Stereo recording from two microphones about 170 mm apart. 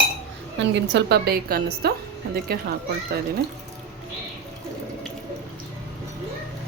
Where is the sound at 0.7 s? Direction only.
80° right; by 1.9 s 65° right (ahead or behind).